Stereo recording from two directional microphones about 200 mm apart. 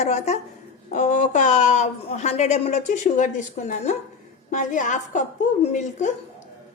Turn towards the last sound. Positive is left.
turn(degrees=35)  # may be behind; listen again after turning